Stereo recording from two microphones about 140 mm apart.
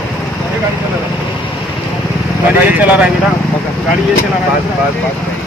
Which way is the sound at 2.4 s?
10° right (ahead or behind).